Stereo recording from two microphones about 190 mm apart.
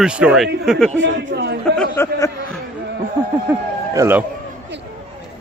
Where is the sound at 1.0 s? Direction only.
65° right (ahead or behind).